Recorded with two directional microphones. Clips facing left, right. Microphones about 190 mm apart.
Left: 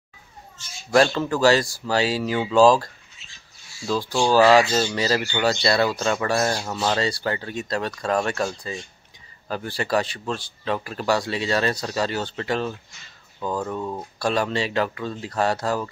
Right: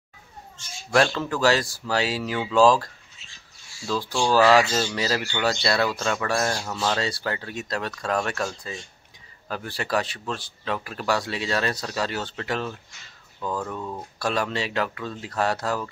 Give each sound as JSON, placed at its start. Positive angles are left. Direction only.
{"t": 0.9, "sound": "speech", "side_deg": 5}
{"t": 13.4, "sound": "speech", "side_deg": 25}
{"t": 14.2, "sound": "speech", "side_deg": 0}